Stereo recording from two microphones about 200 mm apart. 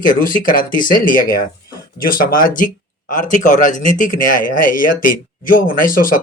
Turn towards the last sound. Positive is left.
turn(degrees=45)  # may be behind; listen again after turning